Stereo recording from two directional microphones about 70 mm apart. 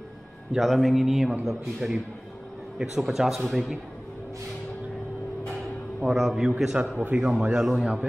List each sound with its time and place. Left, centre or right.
0.6 s a man's voice: centre
6.0 s a man's voice: centre
6.6 s a man's voice: centre
7.0 s a man's voice: right
7.5 s a man's voice: centre